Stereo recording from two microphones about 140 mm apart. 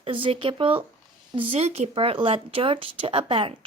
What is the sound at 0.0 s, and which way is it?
Speech, 40° right (ahead or behind).